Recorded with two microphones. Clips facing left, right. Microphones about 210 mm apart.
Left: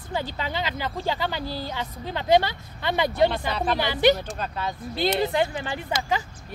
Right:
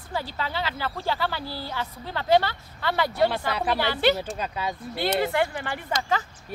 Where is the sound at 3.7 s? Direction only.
15° left (ahead or behind).